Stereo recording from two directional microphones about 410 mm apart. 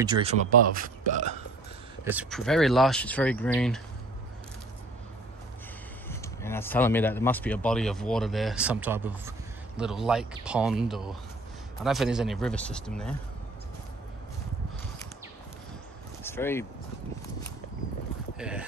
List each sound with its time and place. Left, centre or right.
0.0 s a man's voice: centre
0.7 s a man's voice: centre
2.0 s speech: centre
6.0 s speech: centre
16.2 s vehicle: centre
18.4 s speech: centre